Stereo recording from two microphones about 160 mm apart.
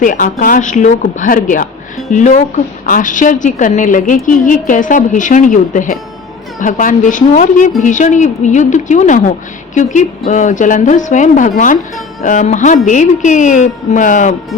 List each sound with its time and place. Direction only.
0.0 s a woman's voice: 55° left (ahead or behind)